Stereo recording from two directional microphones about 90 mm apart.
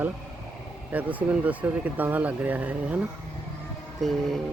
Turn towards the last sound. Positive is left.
turn(degrees=5)  # may be behind; listen again after turning